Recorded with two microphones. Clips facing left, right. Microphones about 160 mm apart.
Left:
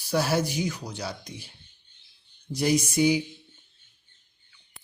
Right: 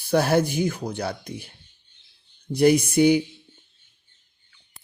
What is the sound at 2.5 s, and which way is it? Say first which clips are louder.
Speech: right 7 dB; 60° right (ahead or behind).